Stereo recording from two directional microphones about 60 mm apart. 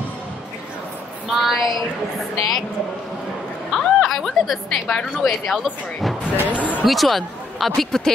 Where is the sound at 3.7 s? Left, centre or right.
Centre.